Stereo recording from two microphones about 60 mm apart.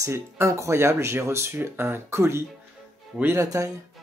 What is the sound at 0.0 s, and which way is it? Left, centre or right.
Speech, right.